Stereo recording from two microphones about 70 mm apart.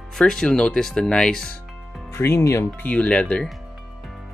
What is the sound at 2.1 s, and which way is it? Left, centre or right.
Speech, left.